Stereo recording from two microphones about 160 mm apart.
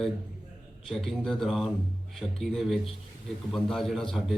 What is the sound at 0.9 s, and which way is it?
A man's voice, 5° left (ahead or behind).